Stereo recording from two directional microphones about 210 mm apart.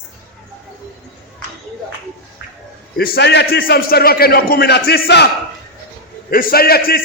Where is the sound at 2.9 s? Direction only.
45° left (ahead or behind).